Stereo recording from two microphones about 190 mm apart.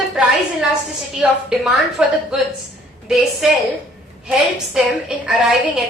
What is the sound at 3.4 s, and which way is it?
A woman's voice, centre (ahead or behind).